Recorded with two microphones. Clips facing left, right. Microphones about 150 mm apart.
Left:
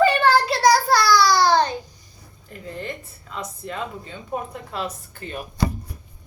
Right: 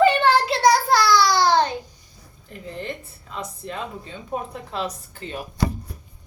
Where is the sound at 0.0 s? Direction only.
25° right (ahead or behind).